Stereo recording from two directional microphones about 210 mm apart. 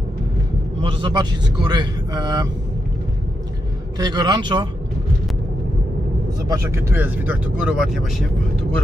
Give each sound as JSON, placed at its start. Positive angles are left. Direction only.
{"t": 0.7, "sound": "speech", "side_deg": -20}
{"t": 4.0, "sound": "speech", "side_deg": -20}
{"t": 6.5, "sound": "speech", "side_deg": -10}